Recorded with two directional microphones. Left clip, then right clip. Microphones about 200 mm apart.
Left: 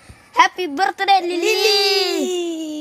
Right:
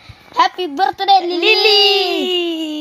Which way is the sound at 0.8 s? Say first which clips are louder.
Right 3 dB; 20° left (ahead or behind).